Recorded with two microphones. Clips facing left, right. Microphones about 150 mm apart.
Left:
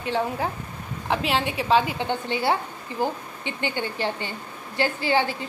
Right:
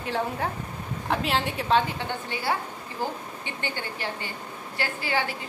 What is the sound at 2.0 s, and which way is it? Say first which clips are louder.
Speech: left 5 dB; 25° left (ahead or behind).